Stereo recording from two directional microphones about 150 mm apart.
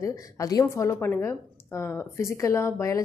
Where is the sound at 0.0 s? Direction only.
25° left (ahead or behind).